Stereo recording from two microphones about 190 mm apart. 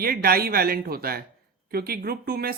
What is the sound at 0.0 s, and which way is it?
Speech, 50° right (ahead or behind).